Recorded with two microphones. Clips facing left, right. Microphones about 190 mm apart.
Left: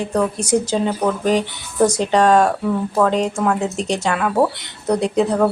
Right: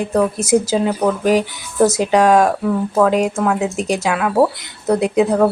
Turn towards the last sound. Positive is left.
turn(degrees=-5)  # may be behind; listen again after turning